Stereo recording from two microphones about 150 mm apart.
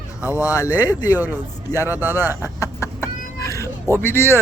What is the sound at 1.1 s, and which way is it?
Speech, 10° right (ahead or behind).